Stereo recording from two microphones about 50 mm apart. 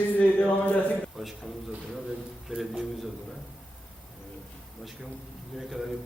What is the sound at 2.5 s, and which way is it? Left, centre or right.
Speech, centre.